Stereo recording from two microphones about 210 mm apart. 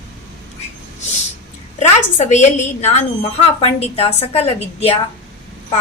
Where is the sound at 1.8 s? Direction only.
35° left (ahead or behind).